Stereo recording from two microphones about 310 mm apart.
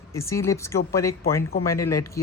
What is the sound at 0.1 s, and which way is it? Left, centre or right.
Speech, centre.